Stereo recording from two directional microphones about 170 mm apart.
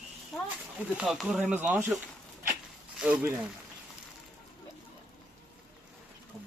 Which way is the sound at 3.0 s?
5° right (ahead or behind).